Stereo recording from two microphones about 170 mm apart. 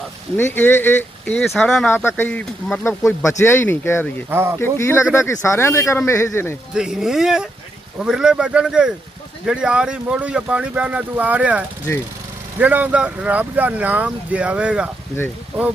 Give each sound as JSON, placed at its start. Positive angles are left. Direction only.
{"t": 0.3, "sound": "speech", "side_deg": 10}
{"t": 2.8, "sound": "speech", "side_deg": 15}
{"t": 4.3, "sound": "speech", "side_deg": -15}
{"t": 4.6, "sound": "speech", "side_deg": 15}
{"t": 6.7, "sound": "speech", "side_deg": -5}